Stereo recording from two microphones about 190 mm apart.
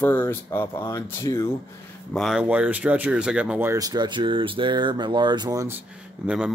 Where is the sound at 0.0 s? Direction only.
10° left (ahead or behind).